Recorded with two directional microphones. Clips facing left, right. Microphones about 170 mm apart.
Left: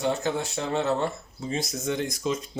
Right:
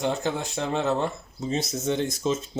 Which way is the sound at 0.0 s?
15° right (ahead or behind).